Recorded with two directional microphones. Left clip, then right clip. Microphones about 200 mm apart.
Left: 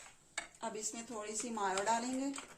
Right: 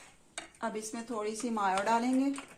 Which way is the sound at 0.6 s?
25° right (ahead or behind).